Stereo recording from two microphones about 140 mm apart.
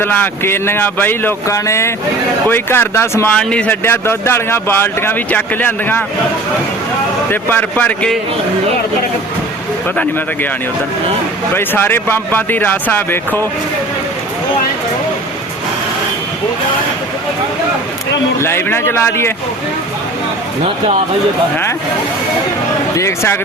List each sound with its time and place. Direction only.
0.0 s speech: 15° left (ahead or behind)
3.3 s speech: 10° left (ahead or behind)
7.3 s speech: 15° left (ahead or behind)
11.5 s speech: 15° left (ahead or behind)
18.3 s speech: 15° left (ahead or behind)
23.0 s speech: 20° left (ahead or behind)